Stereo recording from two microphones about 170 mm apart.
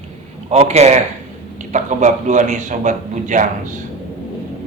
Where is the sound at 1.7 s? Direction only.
45° right (ahead or behind).